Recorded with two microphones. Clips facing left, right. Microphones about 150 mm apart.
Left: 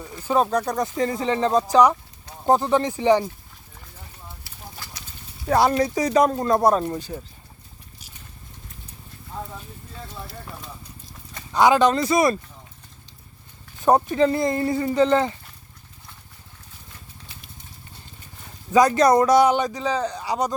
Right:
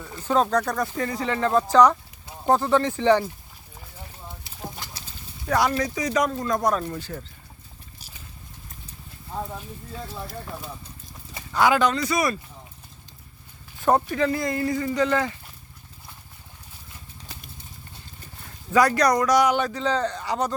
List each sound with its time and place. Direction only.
0.0 s speech: 10° left (ahead or behind)
4.4 s clip-clop: 20° right (ahead or behind)
5.5 s speech: 30° left (ahead or behind)
6.9 s speech: 15° left (ahead or behind)
11.5 s speech: 20° left (ahead or behind)
13.8 s speech: 20° left (ahead or behind)
18.7 s speech: 20° left (ahead or behind)